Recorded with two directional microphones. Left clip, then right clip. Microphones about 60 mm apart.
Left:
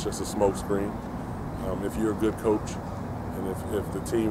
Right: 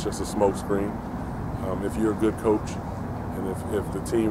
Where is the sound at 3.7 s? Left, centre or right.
Centre.